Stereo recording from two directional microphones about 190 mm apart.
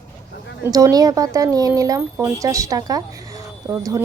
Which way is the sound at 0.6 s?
15° right (ahead or behind).